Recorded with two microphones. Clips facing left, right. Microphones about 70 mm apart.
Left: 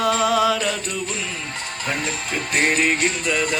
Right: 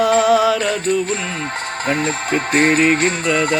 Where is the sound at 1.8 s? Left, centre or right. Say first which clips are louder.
Right 6 dB; right.